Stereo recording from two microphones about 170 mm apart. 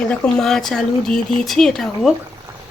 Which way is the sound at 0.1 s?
5° left (ahead or behind).